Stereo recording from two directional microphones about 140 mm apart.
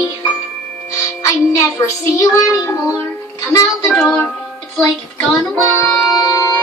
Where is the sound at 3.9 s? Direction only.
10° left (ahead or behind).